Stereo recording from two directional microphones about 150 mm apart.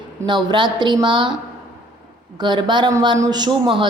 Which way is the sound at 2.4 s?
30° right (ahead or behind).